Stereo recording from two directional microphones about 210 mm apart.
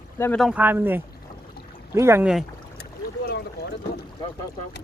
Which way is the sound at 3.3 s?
50° left (ahead or behind).